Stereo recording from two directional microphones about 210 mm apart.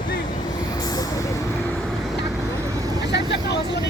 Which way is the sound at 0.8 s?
20° left (ahead or behind).